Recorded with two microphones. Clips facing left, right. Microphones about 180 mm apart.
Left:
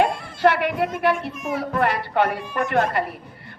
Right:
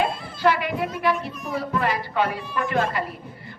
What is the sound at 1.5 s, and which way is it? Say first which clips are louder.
Speech: left 2 dB; 60° left (ahead or behind).